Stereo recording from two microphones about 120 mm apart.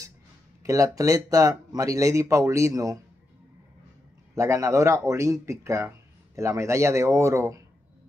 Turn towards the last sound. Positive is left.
turn(degrees=-25)  # may be behind; listen again after turning